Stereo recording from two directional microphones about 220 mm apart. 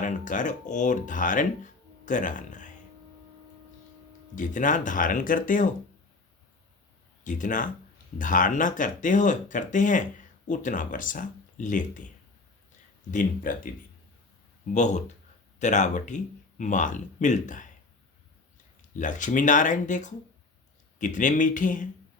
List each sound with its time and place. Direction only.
0.0 s speech: 35° left (ahead or behind)
4.4 s speech: 35° left (ahead or behind)
7.3 s speech: 35° left (ahead or behind)
13.1 s speech: 35° left (ahead or behind)
14.7 s speech: 35° left (ahead or behind)
18.9 s speech: 35° left (ahead or behind)